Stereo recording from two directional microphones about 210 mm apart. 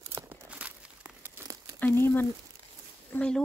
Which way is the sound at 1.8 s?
10° left (ahead or behind).